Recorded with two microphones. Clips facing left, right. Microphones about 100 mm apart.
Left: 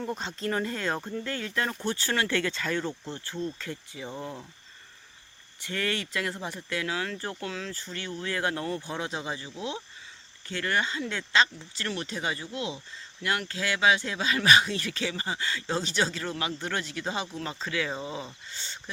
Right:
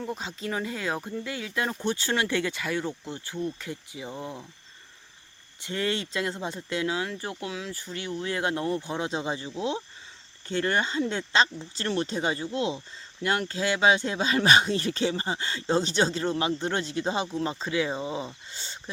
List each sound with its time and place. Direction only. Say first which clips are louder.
0.0 s speech: left 1 dB; centre (ahead or behind)
5.6 s speech: right 2 dB; 20° right (ahead or behind)